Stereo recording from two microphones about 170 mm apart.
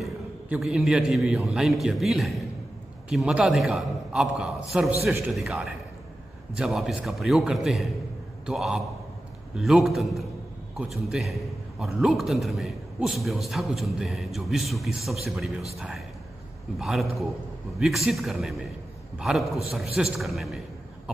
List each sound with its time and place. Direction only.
0.0 s a man's voice: centre (ahead or behind)
16.7 s a man's voice: centre (ahead or behind)